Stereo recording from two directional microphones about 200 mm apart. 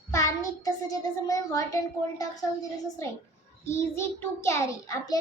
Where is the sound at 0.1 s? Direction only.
15° left (ahead or behind).